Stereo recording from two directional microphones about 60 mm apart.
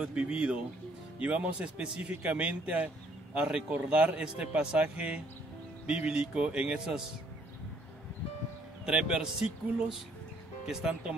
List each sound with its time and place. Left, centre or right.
0.0 s a man's voice: centre
8.8 s a man's voice: centre